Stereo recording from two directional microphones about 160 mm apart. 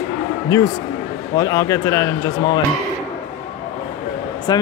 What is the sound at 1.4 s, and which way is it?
Speech, 20° left (ahead or behind).